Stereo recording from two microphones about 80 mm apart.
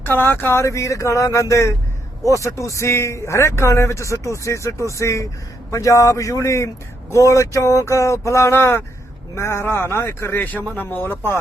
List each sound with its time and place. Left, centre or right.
0.0 s speech: left